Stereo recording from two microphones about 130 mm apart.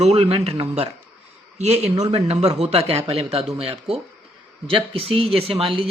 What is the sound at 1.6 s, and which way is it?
Speech, 55° right (ahead or behind).